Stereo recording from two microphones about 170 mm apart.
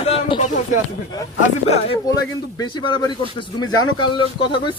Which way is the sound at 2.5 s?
25° left (ahead or behind).